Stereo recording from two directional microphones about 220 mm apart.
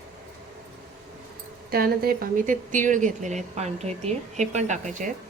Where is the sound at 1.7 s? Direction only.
45° right (ahead or behind).